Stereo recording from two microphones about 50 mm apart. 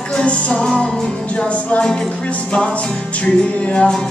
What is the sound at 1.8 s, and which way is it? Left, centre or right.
Music, centre.